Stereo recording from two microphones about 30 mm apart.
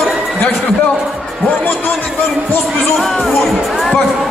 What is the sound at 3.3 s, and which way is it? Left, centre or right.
Music, centre.